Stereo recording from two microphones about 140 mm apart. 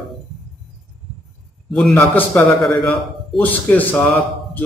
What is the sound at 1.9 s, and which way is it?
Speech, 15° left (ahead or behind).